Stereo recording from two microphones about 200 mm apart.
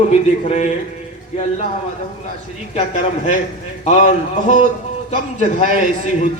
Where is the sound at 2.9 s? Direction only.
35° left (ahead or behind).